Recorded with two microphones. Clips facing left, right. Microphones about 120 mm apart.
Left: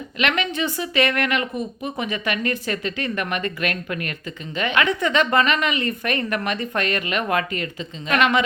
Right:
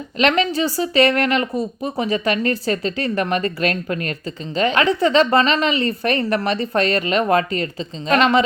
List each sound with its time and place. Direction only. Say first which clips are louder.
0.2 s a woman's voice: right 6 dB; 35° right (ahead or behind)